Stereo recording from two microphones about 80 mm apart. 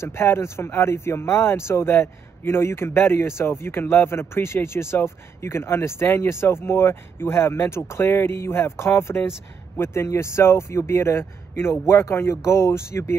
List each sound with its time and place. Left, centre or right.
0.0 s speech: left